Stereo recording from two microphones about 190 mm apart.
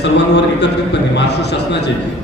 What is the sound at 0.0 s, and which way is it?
A man's voice, 65° left (ahead or behind).